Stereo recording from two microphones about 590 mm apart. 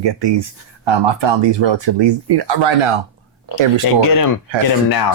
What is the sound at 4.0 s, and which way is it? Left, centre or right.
Speech, left.